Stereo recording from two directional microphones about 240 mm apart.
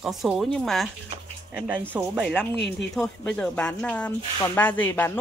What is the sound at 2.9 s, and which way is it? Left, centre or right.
Speech, centre.